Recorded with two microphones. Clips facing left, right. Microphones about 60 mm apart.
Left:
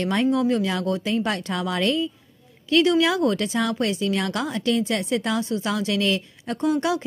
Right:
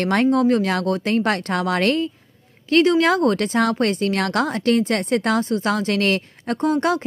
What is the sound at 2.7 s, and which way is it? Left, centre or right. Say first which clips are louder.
A woman's voice: right 3 dB; right.